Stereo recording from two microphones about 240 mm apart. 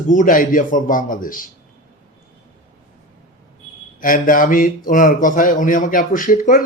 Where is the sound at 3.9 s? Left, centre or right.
Left.